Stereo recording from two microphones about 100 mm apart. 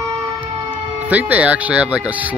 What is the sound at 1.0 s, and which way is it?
Speech, 15° right (ahead or behind).